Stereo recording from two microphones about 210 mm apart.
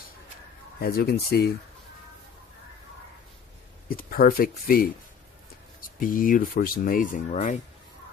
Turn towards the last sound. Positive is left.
turn(degrees=35)  # may be behind; listen again after turning